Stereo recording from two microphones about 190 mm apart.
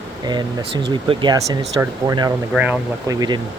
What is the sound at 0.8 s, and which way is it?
Speech, 25° right (ahead or behind).